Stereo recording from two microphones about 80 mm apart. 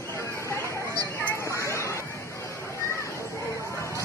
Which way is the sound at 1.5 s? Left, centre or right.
Left.